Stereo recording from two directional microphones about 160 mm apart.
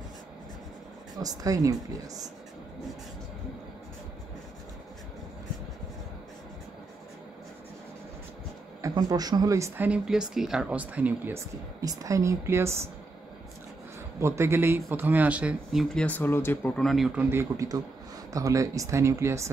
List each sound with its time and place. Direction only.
1.1 s speech: 20° right (ahead or behind)
8.8 s speech: 25° right (ahead or behind)
11.8 s speech: 20° right (ahead or behind)
14.2 s speech: 15° right (ahead or behind); by 16.8 s 15° left (ahead or behind)
16.8 s speech: centre (ahead or behind); by 19.5 s 15° right (ahead or behind)